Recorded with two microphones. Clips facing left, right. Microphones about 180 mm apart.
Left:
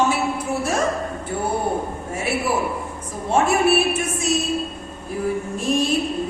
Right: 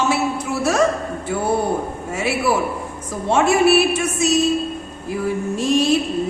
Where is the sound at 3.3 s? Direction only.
80° right.